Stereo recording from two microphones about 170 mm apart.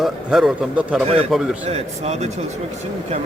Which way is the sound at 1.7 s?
40° right (ahead or behind).